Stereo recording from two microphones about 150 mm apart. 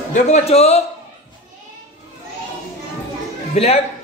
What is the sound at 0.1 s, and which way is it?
Speech, 45° left (ahead or behind).